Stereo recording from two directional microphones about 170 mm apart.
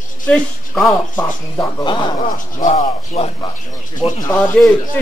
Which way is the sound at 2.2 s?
50° left (ahead or behind).